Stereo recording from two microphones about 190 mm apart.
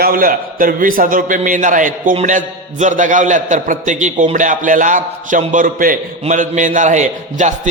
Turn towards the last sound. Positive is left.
turn(degrees=-40)  # may be behind; listen again after turning